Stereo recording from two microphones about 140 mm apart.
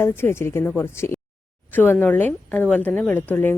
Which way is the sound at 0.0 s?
15° left (ahead or behind).